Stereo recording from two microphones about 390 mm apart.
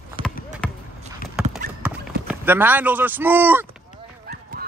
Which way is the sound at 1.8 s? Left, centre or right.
Centre.